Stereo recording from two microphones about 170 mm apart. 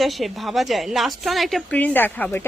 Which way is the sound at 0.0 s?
Centre (ahead or behind).